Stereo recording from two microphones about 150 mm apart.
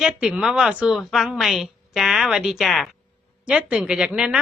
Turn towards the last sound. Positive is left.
turn(degrees=-5)  # may be behind; listen again after turning